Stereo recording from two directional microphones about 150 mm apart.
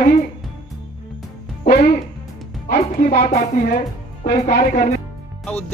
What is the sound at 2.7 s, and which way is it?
Speech, 90° left.